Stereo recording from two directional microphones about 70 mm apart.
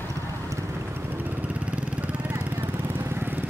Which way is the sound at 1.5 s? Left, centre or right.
Centre.